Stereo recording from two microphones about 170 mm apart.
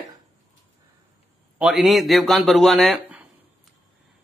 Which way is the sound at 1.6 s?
Centre (ahead or behind).